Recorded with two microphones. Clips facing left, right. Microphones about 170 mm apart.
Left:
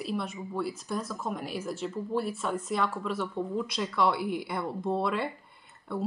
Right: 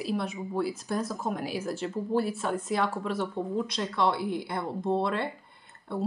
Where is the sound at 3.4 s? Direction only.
30° right (ahead or behind).